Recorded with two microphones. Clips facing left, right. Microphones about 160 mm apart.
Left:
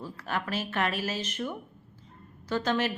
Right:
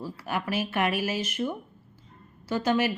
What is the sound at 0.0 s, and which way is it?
A woman's voice, 10° right (ahead or behind).